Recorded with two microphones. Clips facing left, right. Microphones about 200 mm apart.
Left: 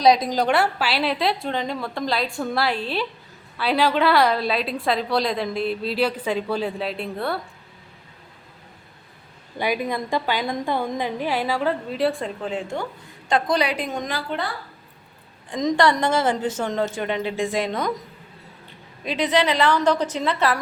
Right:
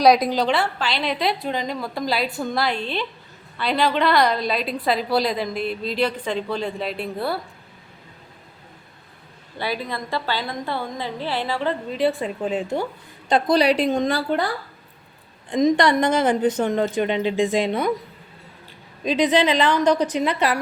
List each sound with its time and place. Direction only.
0.0 s a woman's voice: 20° left (ahead or behind)
0.3 s a woman's voice: 45° left (ahead or behind)
0.8 s a woman's voice: 5° left (ahead or behind)
9.6 s a woman's voice: 15° left (ahead or behind)
12.4 s a woman's voice: 15° right (ahead or behind)
13.7 s a woman's voice: 90° right
13.9 s a woman's voice: 30° right (ahead or behind)
15.7 s a woman's voice: 20° right (ahead or behind)
19.0 s a woman's voice: 20° right (ahead or behind)